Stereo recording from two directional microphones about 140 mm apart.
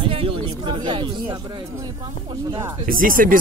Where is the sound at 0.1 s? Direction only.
40° right (ahead or behind).